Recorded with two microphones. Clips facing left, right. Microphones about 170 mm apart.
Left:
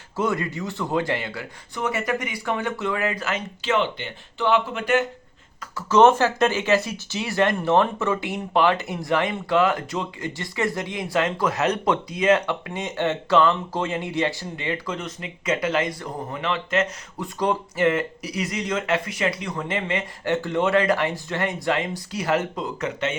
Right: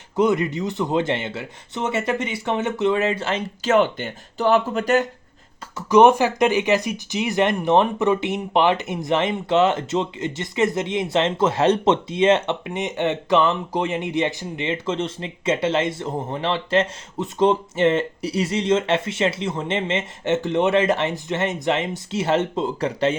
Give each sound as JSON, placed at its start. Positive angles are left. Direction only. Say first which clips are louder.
{"t": 0.2, "sound": "speech", "louder": "right 6 dB", "side_deg": -20}
{"t": 3.6, "sound": "speech", "louder": "right 6 dB", "side_deg": -45}
{"t": 5.7, "sound": "speech", "louder": "right 2 dB", "side_deg": -15}